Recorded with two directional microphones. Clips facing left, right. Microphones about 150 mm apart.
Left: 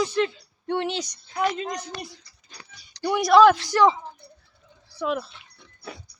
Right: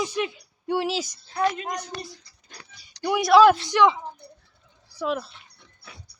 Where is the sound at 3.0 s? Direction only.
5° right (ahead or behind).